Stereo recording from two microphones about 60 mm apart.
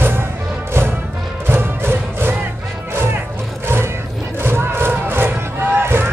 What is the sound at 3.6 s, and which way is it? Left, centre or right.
Vehicle, right.